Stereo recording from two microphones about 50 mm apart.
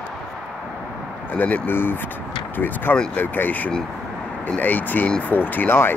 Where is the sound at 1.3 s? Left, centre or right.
Left.